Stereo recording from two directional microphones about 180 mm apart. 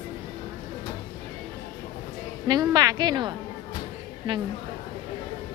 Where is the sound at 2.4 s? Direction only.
20° right (ahead or behind).